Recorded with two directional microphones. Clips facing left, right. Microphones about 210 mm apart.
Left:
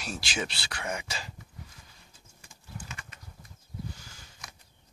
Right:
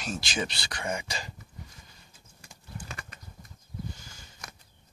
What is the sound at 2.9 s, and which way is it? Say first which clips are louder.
Horse: right 3 dB; 40° right (ahead or behind).